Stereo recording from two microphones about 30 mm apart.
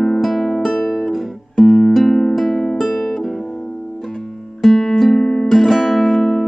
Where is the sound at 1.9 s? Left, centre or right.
Centre.